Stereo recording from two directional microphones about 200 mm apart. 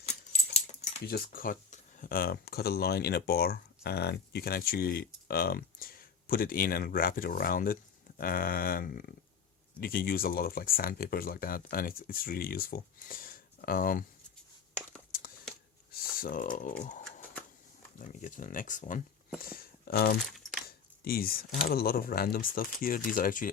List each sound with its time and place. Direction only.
0.0 s keys jangling: 35° left (ahead or behind)
1.0 s speech: 50° left (ahead or behind)
16.2 s speech: 45° left (ahead or behind)
18.0 s speech: 40° left (ahead or behind)
20.2 s keys jangling: centre (ahead or behind)
20.7 s speech: 50° left (ahead or behind)